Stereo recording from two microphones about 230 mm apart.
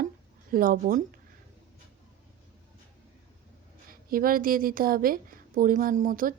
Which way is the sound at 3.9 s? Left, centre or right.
Right.